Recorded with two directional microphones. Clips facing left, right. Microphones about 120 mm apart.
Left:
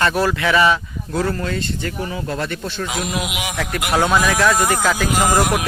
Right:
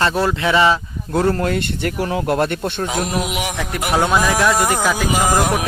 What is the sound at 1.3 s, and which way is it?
Speech, 60° right (ahead or behind).